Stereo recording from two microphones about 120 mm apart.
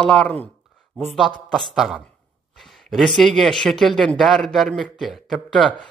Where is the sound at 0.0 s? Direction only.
5° left (ahead or behind).